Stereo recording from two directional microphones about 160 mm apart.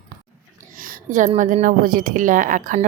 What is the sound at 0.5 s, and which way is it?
A woman's voice, 60° right (ahead or behind).